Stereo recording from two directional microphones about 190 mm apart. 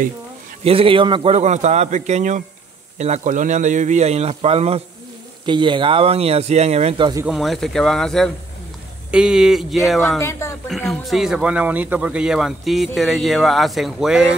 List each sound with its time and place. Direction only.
0.7 s a man's voice: 30° right (ahead or behind)
7.2 s speech: centre (ahead or behind)
10.1 s speech: 15° left (ahead or behind)
10.7 s speech: centre (ahead or behind)